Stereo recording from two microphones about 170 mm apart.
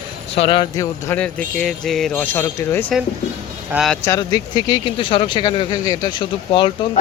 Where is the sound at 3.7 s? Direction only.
Centre (ahead or behind).